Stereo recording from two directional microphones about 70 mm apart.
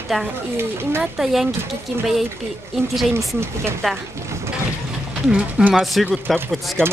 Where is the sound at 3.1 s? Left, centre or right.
Right.